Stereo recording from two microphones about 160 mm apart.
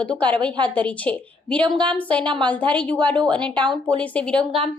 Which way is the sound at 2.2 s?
30° right (ahead or behind).